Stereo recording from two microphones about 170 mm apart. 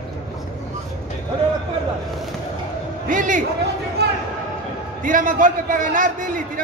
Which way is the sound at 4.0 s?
75° right (ahead or behind).